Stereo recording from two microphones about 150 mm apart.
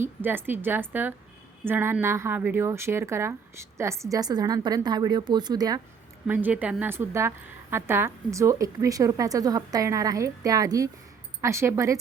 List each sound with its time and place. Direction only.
0.0 s a woman's voice: 15° right (ahead or behind)
6.2 s a woman's voice: 10° right (ahead or behind)